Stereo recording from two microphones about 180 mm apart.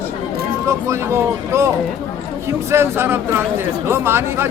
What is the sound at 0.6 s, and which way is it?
Speech, 15° right (ahead or behind).